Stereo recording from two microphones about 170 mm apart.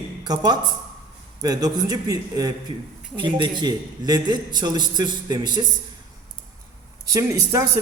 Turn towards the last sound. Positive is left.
turn(degrees=-20)  # may be behind; listen again after turning